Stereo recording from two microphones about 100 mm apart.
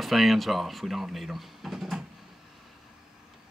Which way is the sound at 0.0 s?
Centre (ahead or behind).